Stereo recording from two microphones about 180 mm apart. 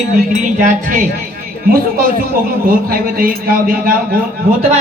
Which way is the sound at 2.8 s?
55° right (ahead or behind).